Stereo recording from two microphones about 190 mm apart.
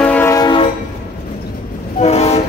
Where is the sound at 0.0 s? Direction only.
10° left (ahead or behind).